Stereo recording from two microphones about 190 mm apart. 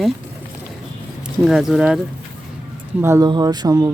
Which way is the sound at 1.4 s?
Centre (ahead or behind).